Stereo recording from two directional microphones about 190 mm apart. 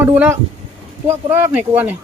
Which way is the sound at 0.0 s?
10° right (ahead or behind).